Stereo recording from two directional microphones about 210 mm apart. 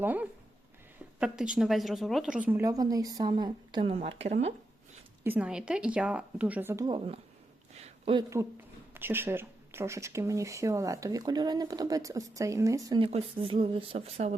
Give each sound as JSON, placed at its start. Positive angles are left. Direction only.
{"t": 0.0, "sound": "speech", "side_deg": -10}
{"t": 5.2, "sound": "speech", "side_deg": -10}
{"t": 7.8, "sound": "a sound", "side_deg": -25}
{"t": 9.0, "sound": "speech", "side_deg": -10}
{"t": 13.1, "sound": "speech", "side_deg": -30}